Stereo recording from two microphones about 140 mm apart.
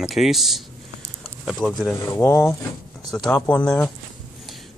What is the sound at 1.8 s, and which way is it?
Speech, 25° left (ahead or behind).